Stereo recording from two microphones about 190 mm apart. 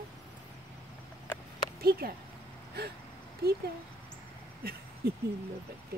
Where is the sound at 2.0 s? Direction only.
50° right (ahead or behind).